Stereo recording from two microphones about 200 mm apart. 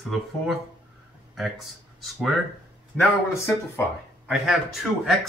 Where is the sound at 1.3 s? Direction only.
Centre (ahead or behind).